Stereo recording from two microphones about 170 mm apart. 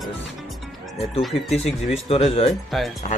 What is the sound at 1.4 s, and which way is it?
Speech, 40° left (ahead or behind).